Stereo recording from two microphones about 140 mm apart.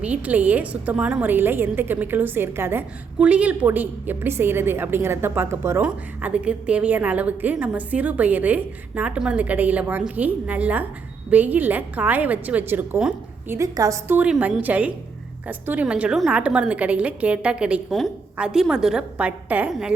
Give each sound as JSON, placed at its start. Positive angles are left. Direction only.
{"t": 0.0, "sound": "a woman's voice", "side_deg": -10}
{"t": 13.5, "sound": "a woman's voice", "side_deg": -25}
{"t": 14.2, "sound": "a woman's voice", "side_deg": -10}